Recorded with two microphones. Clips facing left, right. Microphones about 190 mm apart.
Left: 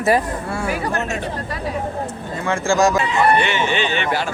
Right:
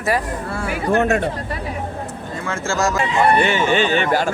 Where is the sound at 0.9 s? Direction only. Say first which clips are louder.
Right 7 dB; 55° right (ahead or behind).